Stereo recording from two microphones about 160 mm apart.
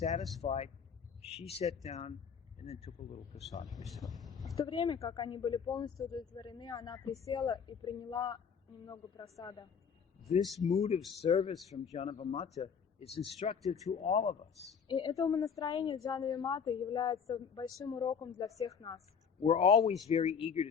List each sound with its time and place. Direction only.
0.2 s speech: centre (ahead or behind)
0.4 s speech: 40° left (ahead or behind)
3.8 s speech: centre (ahead or behind)
4.5 s a woman's voice: 30° left (ahead or behind)
10.8 s speech: 40° left (ahead or behind)
14.8 s a woman's voice: 30° left (ahead or behind)
19.4 s speech: 35° left (ahead or behind)